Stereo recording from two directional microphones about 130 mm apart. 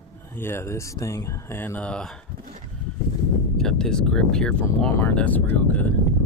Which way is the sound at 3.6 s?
5° left (ahead or behind).